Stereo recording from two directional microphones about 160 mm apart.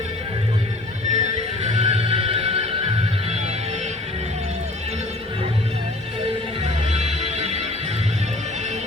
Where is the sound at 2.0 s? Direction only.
35° right (ahead or behind).